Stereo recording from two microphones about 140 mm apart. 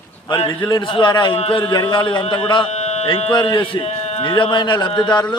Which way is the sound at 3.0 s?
40° left (ahead or behind).